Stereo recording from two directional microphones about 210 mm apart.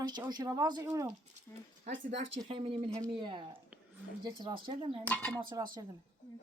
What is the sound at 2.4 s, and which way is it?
Speech, 25° right (ahead or behind).